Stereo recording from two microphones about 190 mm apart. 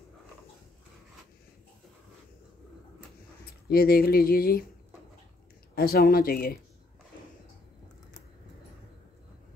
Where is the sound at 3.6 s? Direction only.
55° left (ahead or behind).